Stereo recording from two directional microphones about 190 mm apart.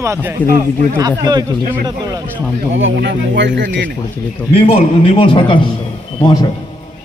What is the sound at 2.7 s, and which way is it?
Speech, 90° right.